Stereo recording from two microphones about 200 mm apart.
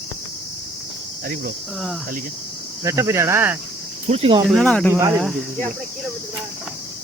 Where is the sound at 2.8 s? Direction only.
15° right (ahead or behind).